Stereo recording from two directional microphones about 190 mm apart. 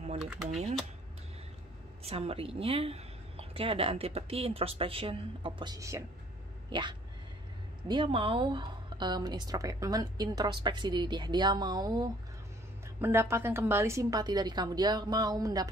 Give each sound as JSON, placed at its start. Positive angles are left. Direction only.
{"t": 0.2, "sound": "speech", "side_deg": -5}
{"t": 2.0, "sound": "a woman's voice", "side_deg": -30}